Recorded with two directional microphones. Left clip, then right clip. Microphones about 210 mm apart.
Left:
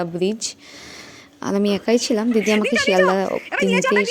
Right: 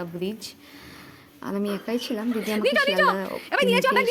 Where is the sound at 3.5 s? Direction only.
5° right (ahead or behind).